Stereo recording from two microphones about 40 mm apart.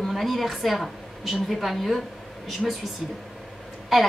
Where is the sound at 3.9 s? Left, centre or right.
Centre.